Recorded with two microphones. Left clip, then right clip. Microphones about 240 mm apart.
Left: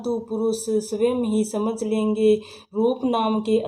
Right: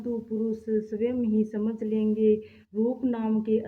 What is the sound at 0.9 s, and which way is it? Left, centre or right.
Speech, left.